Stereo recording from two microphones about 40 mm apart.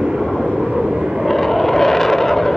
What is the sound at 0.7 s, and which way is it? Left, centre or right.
Vehicle, centre.